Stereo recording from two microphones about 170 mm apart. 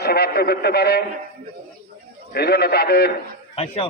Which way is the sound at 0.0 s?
70° left (ahead or behind).